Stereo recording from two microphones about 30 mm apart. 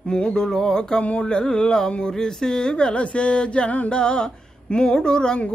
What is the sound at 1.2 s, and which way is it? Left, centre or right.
Speech, left.